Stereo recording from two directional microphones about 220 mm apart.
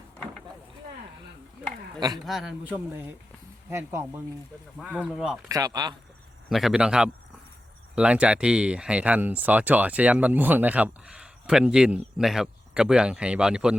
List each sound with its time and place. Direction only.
2.0 s speech: 20° right (ahead or behind)
2.2 s speech: centre (ahead or behind)
5.5 s speech: 15° right (ahead or behind)
6.5 s speech: centre (ahead or behind)